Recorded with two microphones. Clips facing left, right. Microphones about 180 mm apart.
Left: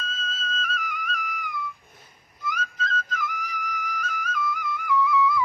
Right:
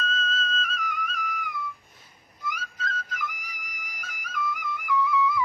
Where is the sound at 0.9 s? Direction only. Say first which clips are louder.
Even; centre (ahead or behind).